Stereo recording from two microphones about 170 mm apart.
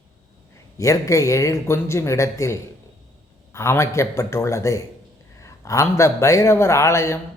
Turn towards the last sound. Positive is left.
turn(degrees=15)  # may be behind; listen again after turning